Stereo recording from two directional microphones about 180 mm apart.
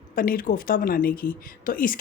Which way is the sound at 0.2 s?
50° left (ahead or behind).